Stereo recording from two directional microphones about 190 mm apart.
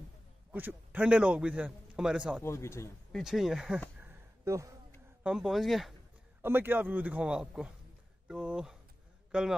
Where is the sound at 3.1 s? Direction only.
Centre (ahead or behind).